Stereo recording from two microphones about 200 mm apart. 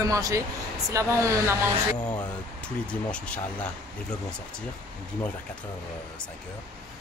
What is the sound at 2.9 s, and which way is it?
Speech, 5° left (ahead or behind).